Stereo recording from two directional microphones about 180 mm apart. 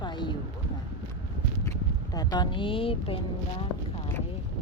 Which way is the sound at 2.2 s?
25° left (ahead or behind).